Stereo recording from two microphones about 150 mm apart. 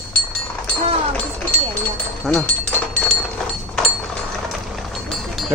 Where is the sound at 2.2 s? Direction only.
5° left (ahead or behind).